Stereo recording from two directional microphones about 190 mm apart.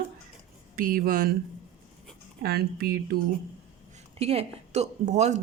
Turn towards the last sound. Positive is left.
turn(degrees=-35)  # may be behind; listen again after turning